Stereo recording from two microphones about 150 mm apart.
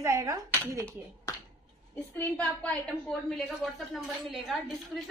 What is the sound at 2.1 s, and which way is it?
A woman's voice, 10° left (ahead or behind).